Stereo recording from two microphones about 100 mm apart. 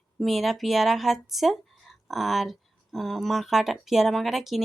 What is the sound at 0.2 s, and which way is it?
Speech, centre (ahead or behind).